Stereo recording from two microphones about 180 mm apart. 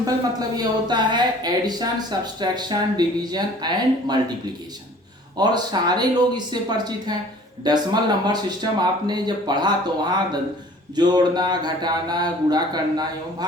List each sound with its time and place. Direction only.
0.0 s speech: 20° right (ahead or behind)
5.4 s speech: 25° right (ahead or behind)